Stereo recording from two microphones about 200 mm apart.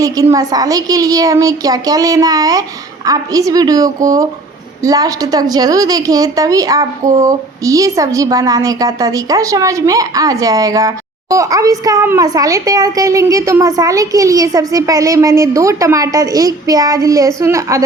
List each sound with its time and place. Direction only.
0.0 s a woman's voice: 15° right (ahead or behind)